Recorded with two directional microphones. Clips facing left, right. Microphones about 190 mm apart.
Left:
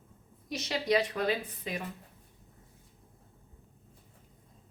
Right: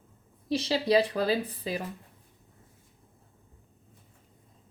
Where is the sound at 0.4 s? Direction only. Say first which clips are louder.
Right 5 dB; 30° right (ahead or behind).